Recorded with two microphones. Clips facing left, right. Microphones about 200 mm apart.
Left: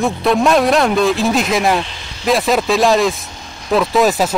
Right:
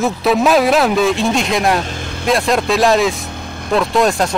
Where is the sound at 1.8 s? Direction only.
50° right (ahead or behind).